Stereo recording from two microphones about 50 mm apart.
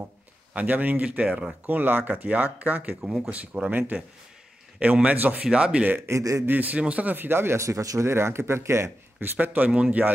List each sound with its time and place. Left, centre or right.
0.5 s speech: right
1.2 s a man's voice: right
1.7 s speech: right
4.7 s a man's voice: right
5.4 s a man's voice: centre
6.0 s speech: right
6.4 s a man's voice: right
7.2 s speech: right
7.5 s a man's voice: right
9.2 s speech: right
9.7 s a man's voice: right